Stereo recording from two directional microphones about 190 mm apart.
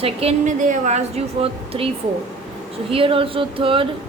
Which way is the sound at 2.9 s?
30° right (ahead or behind).